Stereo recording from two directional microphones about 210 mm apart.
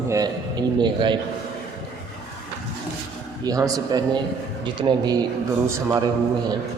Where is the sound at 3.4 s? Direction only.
15° right (ahead or behind).